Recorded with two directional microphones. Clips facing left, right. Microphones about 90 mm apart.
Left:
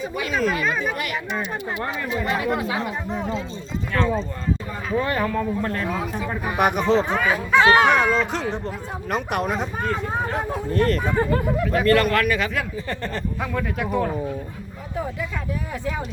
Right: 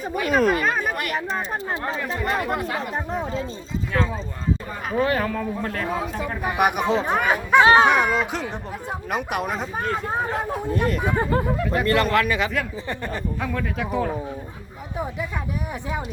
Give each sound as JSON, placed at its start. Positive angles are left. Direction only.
{"t": 0.0, "sound": "speech", "side_deg": -45}
{"t": 2.3, "sound": "speech", "side_deg": -50}
{"t": 3.9, "sound": "speech", "side_deg": -5}
{"t": 7.9, "sound": "speech", "side_deg": -10}
{"t": 10.7, "sound": "speech", "side_deg": -10}
{"t": 11.6, "sound": "speech", "side_deg": 0}
{"t": 11.9, "sound": "a man's voice", "side_deg": -20}
{"t": 13.4, "sound": "speech", "side_deg": 0}